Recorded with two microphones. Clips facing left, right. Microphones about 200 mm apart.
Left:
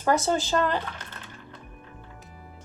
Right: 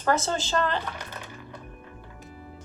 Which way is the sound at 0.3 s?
15° left (ahead or behind).